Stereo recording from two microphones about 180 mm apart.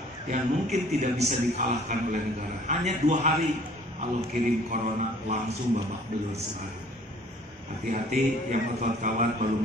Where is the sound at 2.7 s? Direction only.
40° right (ahead or behind).